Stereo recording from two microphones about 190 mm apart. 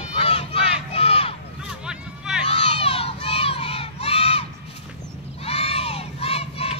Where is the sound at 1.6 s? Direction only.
5° right (ahead or behind).